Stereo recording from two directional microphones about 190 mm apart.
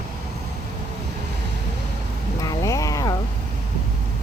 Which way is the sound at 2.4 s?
15° left (ahead or behind).